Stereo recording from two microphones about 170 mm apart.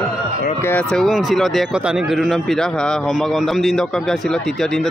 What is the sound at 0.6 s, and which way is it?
Speech, 10° left (ahead or behind).